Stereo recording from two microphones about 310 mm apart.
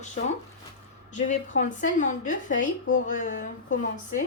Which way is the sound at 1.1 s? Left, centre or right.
Left.